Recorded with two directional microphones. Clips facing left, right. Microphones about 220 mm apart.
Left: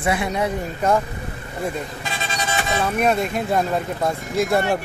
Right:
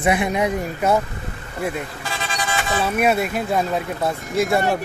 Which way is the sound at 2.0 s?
20° left (ahead or behind).